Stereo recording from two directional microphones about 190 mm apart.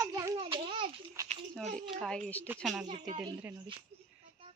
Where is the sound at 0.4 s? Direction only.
25° right (ahead or behind).